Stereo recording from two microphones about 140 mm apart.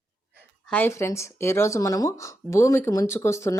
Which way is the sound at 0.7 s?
15° left (ahead or behind).